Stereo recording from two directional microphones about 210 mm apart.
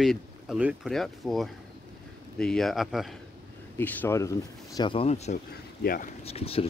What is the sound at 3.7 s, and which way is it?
Speech, 10° left (ahead or behind).